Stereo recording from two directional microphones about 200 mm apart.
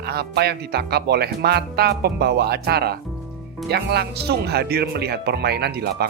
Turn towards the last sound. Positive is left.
turn(degrees=-55)  # may be behind; listen again after turning